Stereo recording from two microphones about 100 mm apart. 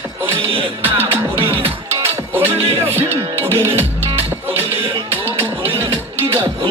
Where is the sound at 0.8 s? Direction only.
20° right (ahead or behind).